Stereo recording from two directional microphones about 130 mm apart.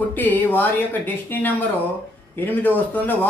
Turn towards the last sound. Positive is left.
turn(degrees=15)  # may be behind; listen again after turning